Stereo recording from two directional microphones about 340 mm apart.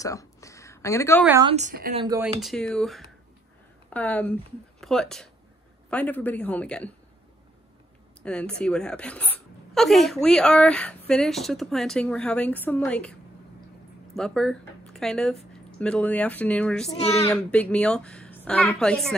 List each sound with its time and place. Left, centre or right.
0.0 s a sound: centre
1.2 s speech: centre
1.5 s speech: right
2.0 s a woman's voice: centre
8.2 s a woman's voice: centre
14.1 s a woman's voice: centre